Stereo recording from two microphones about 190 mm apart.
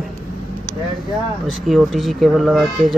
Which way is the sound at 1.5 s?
Centre (ahead or behind).